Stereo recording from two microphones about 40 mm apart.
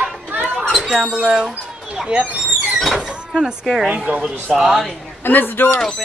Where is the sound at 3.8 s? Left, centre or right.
Right.